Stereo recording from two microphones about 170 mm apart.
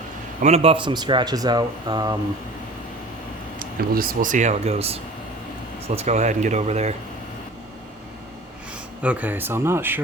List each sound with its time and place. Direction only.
0.4 s speech: 35° right (ahead or behind)
3.6 s speech: 60° right (ahead or behind); by 6.9 s 40° right (ahead or behind)
9.0 s speech: 10° right (ahead or behind)